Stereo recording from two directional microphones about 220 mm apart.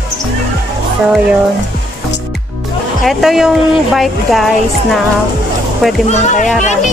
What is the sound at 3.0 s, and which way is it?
Speech, centre (ahead or behind).